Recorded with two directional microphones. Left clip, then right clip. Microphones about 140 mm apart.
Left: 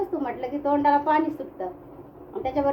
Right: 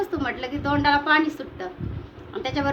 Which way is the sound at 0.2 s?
5° left (ahead or behind).